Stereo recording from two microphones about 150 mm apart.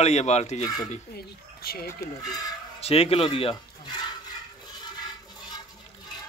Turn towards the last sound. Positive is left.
turn(degrees=25)  # may be behind; listen again after turning